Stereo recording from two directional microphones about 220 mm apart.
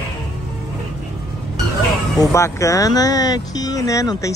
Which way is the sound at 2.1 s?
15° left (ahead or behind).